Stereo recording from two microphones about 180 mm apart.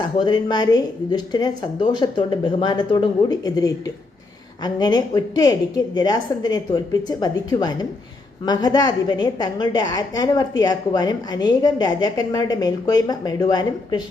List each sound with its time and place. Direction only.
0.0 s a woman's voice: 25° left (ahead or behind)